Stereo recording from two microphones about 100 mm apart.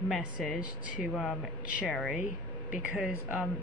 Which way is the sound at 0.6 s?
15° right (ahead or behind).